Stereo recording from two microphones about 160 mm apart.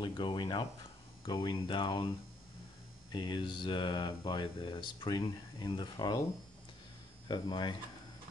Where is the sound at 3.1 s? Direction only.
30° left (ahead or behind).